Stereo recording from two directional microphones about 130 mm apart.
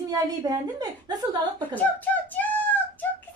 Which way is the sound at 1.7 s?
15° left (ahead or behind).